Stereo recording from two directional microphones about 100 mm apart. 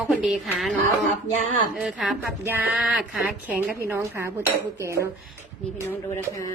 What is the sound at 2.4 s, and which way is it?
Speech, 25° right (ahead or behind).